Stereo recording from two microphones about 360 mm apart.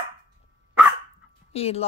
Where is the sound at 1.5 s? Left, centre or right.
Centre.